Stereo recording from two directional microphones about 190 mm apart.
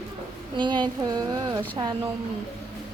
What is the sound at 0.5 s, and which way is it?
Speech, 25° right (ahead or behind).